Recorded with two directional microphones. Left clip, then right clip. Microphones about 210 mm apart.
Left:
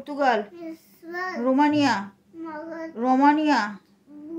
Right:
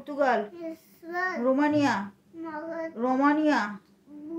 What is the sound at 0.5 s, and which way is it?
Child singing, centre (ahead or behind).